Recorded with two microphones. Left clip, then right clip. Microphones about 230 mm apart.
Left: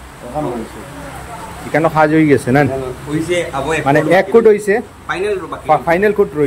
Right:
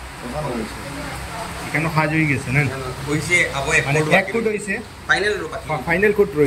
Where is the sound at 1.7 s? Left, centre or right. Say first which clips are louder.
Left 9 dB; centre.